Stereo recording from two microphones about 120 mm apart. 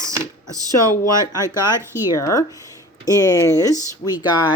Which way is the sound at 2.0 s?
30° left (ahead or behind).